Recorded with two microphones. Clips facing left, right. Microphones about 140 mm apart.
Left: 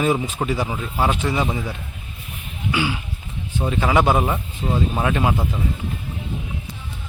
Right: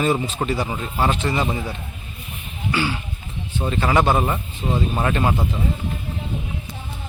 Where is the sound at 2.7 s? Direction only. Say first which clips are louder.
Even; 10° left (ahead or behind).